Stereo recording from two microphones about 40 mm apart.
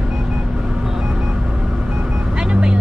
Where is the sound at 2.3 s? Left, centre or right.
Right.